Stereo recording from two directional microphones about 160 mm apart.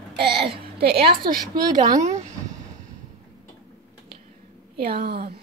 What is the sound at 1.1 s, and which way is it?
Speech, 65° right (ahead or behind).